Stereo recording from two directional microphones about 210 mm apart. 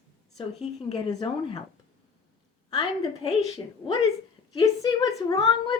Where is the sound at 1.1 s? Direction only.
20° left (ahead or behind).